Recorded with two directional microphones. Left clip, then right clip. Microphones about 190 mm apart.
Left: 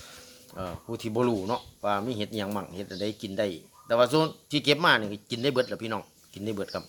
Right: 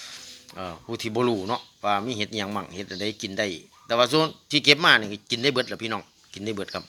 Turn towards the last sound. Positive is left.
turn(degrees=5)  # may be behind; listen again after turning